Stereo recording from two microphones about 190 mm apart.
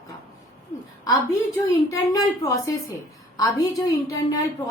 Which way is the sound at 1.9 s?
20° left (ahead or behind).